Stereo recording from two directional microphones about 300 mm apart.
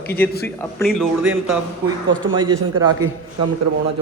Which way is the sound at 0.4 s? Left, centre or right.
Centre.